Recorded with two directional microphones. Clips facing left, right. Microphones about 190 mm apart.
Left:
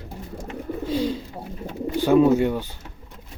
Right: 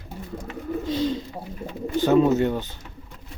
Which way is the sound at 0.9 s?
10° left (ahead or behind).